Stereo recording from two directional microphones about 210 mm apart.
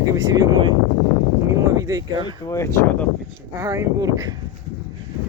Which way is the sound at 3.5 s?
15° right (ahead or behind).